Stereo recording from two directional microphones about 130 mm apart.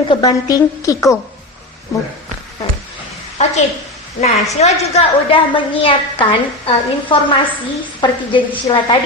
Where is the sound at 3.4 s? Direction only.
60° left (ahead or behind).